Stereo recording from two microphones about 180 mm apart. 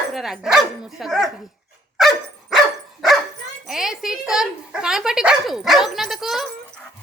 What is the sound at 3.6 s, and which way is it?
Speech, centre (ahead or behind).